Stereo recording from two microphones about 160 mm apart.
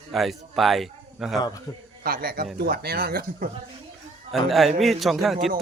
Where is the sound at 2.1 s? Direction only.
70° right (ahead or behind).